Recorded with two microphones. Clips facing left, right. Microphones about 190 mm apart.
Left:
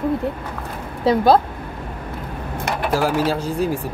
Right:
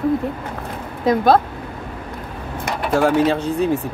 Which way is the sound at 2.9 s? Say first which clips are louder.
Right 4 dB; 5° left (ahead or behind).